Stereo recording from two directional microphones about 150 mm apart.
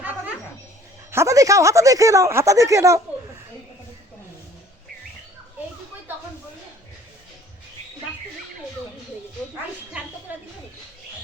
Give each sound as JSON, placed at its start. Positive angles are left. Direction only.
{"t": 1.1, "sound": "speech", "side_deg": -20}